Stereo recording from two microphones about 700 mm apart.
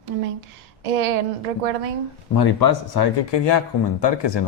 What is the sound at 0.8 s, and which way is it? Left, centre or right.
Speech, right.